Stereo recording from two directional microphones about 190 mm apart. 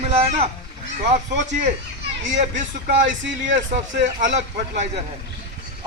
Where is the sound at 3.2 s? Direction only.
70° right (ahead or behind).